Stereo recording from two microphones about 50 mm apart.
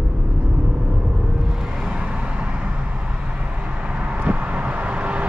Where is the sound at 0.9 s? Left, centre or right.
Centre.